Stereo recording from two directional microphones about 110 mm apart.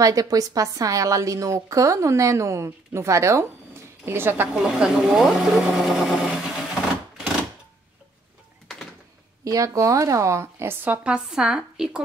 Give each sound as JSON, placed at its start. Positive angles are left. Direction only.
{"t": 0.0, "sound": "a woman's voice", "side_deg": -35}
{"t": 4.6, "sound": "speech", "side_deg": -5}
{"t": 9.4, "sound": "a woman's voice", "side_deg": -30}